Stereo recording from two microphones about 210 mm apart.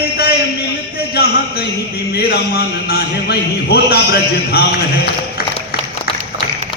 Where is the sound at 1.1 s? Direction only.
50° left (ahead or behind).